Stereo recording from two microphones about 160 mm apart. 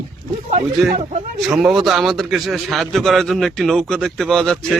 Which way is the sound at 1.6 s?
Centre (ahead or behind).